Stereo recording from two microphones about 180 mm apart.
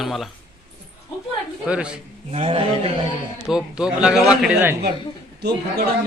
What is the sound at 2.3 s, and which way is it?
Speech, 30° right (ahead or behind).